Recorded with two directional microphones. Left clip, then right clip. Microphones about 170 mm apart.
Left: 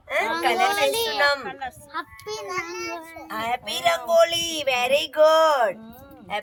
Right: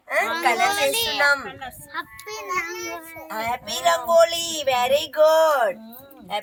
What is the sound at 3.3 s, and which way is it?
A woman's voice, 30° left (ahead or behind).